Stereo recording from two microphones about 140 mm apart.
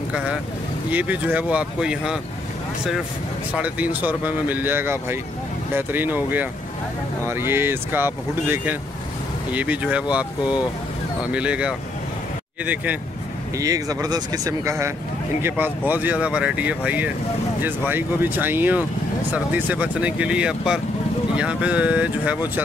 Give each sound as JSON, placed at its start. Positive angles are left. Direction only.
{"t": 0.1, "sound": "speech", "side_deg": -5}
{"t": 3.5, "sound": "speech", "side_deg": -10}
{"t": 13.6, "sound": "speech", "side_deg": -25}